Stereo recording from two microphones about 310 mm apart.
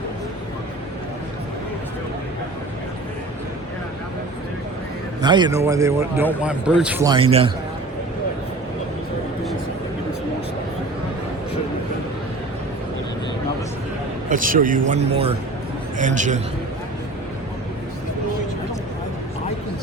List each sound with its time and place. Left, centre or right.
5.2 s a man's voice: centre
14.3 s speech: right